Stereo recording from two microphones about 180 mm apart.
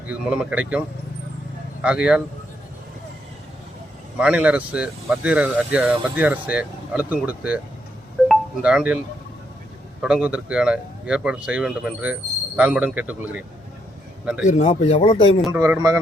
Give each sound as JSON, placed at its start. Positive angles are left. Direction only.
{"t": 0.1, "sound": "speech", "side_deg": -5}
{"t": 4.2, "sound": "speech", "side_deg": -5}
{"t": 8.3, "sound": "marimba", "side_deg": -5}
{"t": 10.0, "sound": "speech", "side_deg": -5}
{"t": 14.4, "sound": "speech", "side_deg": 40}
{"t": 15.5, "sound": "speech", "side_deg": -15}